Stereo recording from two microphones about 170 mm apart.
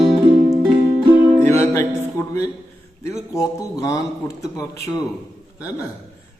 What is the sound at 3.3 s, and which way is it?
A man's voice, 20° left (ahead or behind).